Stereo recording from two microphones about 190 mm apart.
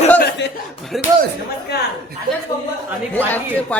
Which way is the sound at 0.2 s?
60° left (ahead or behind).